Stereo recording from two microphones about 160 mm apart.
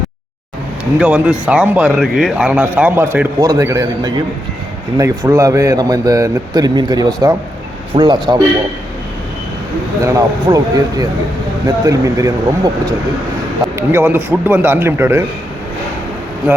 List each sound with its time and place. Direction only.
0.9 s a man's voice: 5° right (ahead or behind); by 8.4 s 30° right (ahead or behind)
10.0 s a man's voice: 20° right (ahead or behind)